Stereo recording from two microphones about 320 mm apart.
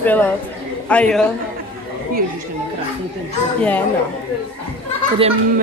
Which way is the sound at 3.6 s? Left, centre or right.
Centre.